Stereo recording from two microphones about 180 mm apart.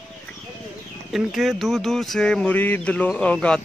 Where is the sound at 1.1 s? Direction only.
Centre (ahead or behind).